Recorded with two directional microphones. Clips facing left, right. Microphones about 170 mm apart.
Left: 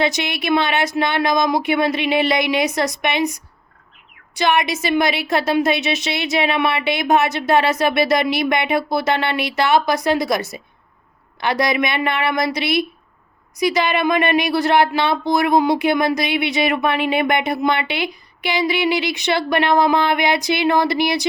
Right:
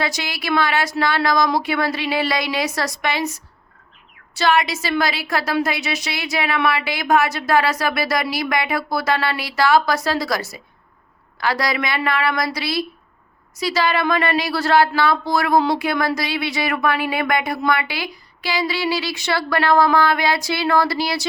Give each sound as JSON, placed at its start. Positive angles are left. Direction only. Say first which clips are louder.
{"t": 0.0, "sound": "speech", "louder": "left 5 dB", "side_deg": 20}